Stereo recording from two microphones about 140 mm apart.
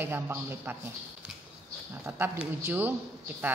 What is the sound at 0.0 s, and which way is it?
Speech, 15° right (ahead or behind).